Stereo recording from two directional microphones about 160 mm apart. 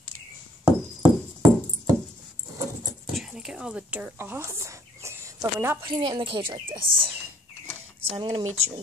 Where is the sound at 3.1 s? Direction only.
Centre (ahead or behind); by 5.8 s 15° right (ahead or behind).